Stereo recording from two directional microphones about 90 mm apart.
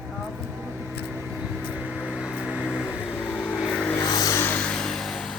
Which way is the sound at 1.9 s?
10° right (ahead or behind).